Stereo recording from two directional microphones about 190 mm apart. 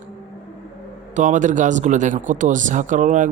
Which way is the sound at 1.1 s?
40° right (ahead or behind).